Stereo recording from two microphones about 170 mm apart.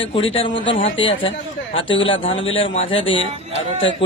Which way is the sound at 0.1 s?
35° left (ahead or behind).